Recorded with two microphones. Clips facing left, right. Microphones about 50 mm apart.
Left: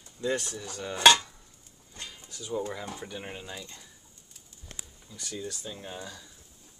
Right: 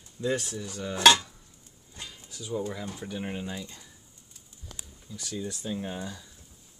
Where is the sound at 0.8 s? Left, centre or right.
Centre.